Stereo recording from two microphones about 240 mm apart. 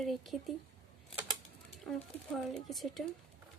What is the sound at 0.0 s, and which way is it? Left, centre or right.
Speech, centre.